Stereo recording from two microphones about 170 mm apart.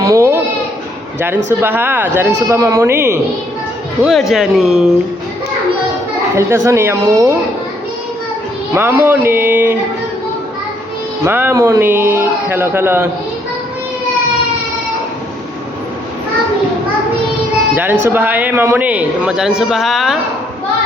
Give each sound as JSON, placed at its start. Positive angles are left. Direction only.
{"t": 0.0, "sound": "a sound", "side_deg": -20}
{"t": 1.5, "sound": "a woman's voice", "side_deg": -15}
{"t": 4.0, "sound": "speech", "side_deg": 0}
{"t": 6.3, "sound": "a woman's voice", "side_deg": -15}
{"t": 8.7, "sound": "a woman's voice", "side_deg": -15}
{"t": 11.3, "sound": "a woman's voice", "side_deg": -10}
{"t": 18.0, "sound": "a woman's voice", "side_deg": -10}